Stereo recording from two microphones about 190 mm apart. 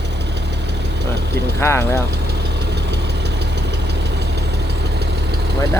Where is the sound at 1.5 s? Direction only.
15° left (ahead or behind).